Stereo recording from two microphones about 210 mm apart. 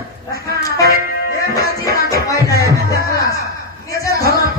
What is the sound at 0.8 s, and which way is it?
Music, 45° right (ahead or behind).